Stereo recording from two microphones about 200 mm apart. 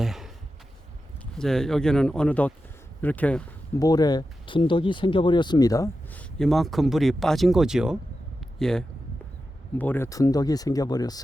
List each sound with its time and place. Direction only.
0.0 s a sound: centre (ahead or behind)
1.4 s speech: centre (ahead or behind)
3.8 s speech: 20° left (ahead or behind)